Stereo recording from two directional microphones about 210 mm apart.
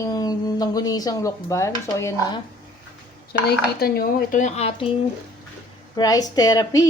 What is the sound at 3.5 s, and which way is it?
Speech, 45° left (ahead or behind).